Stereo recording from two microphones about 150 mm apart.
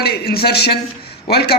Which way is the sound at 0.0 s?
90° left.